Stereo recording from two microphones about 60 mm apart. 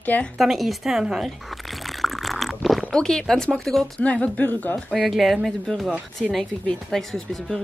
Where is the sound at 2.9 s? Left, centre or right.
Centre.